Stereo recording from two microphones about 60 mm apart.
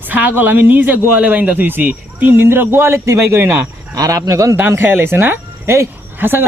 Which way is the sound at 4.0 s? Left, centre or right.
Right.